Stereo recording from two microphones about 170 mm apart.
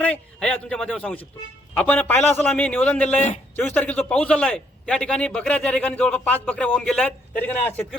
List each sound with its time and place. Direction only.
0.0 s a man's voice: 5° left (ahead or behind)
3.2 s a man's voice: 45° left (ahead or behind)
3.5 s a man's voice: 10° left (ahead or behind)